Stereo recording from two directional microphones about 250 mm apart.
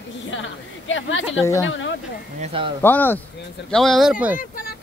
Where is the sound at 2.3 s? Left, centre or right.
Right.